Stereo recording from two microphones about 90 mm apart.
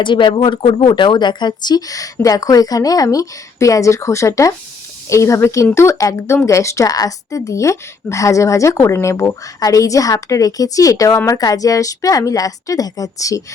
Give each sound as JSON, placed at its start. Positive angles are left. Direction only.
{"t": 0.0, "sound": "a woman's voice", "side_deg": 60}